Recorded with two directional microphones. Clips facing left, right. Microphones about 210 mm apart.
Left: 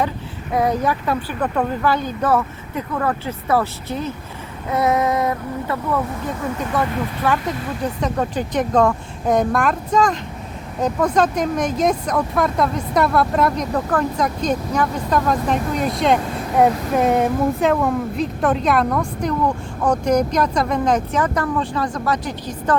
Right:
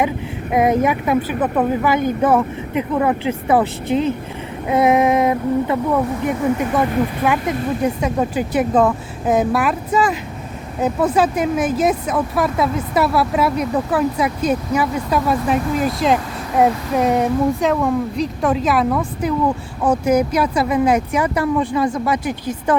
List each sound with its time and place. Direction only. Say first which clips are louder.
0.5 s speech: right 3 dB; 20° right (ahead or behind)